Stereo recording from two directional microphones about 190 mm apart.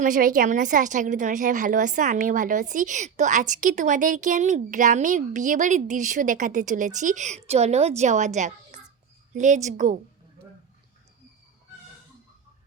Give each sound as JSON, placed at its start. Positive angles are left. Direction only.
{"t": 0.0, "sound": "a woman's voice", "side_deg": -45}